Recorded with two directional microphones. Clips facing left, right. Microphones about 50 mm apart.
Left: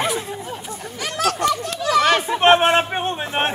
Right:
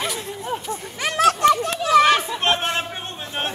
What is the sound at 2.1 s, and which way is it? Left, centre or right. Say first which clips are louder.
Chatter: left 4 dB; left.